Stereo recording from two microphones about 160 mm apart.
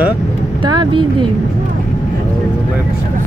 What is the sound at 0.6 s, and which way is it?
Speech, 30° right (ahead or behind).